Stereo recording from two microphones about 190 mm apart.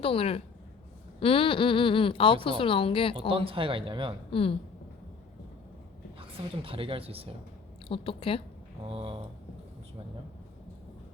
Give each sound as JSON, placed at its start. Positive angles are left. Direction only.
{"t": 0.0, "sound": "a woman's voice", "side_deg": 30}
{"t": 3.2, "sound": "a woman's voice", "side_deg": -30}
{"t": 4.3, "sound": "a woman's voice", "side_deg": 30}
{"t": 6.1, "sound": "a woman's voice", "side_deg": -30}
{"t": 7.9, "sound": "speech", "side_deg": 30}
{"t": 8.9, "sound": "a woman's voice", "side_deg": -30}